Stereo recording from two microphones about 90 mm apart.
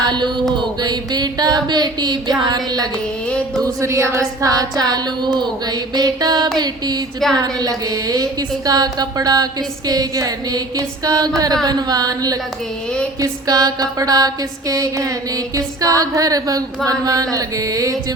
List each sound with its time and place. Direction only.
0.0 s mantra: 55° right (ahead or behind)
0.5 s music: 50° right (ahead or behind)
3.6 s a woman's voice: 35° right (ahead or behind)
15.5 s a sound: 40° right (ahead or behind)